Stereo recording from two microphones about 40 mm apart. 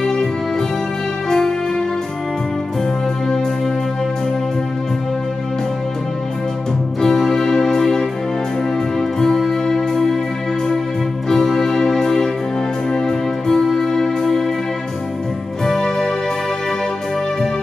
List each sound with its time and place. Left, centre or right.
0.0 s music: centre
7.0 s music: centre
11.2 s music: centre
15.6 s music: centre